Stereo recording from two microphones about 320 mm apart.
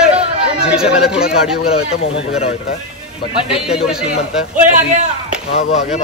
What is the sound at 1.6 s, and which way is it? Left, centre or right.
Speech, centre.